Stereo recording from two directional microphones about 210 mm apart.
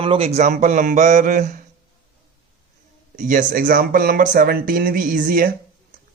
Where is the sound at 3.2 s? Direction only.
40° right (ahead or behind).